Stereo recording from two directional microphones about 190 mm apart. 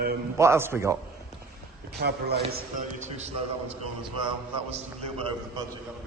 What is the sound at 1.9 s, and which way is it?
Speech, 55° right (ahead or behind).